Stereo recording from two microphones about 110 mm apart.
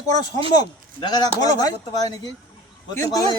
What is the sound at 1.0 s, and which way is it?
Speech, 40° left (ahead or behind).